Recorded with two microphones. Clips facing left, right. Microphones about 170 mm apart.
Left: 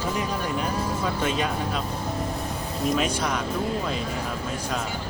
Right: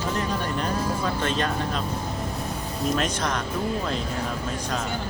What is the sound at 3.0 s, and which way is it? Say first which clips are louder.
Speech: left 1 dB; 10° left (ahead or behind).